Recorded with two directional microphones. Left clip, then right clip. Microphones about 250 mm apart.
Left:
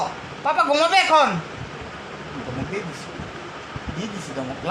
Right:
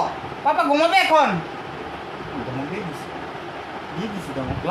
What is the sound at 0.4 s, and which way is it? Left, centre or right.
Speech, centre.